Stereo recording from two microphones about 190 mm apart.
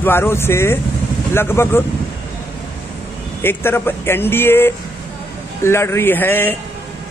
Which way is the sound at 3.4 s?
10° left (ahead or behind).